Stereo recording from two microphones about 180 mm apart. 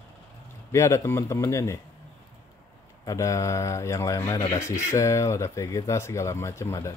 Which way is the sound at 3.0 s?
20° left (ahead or behind).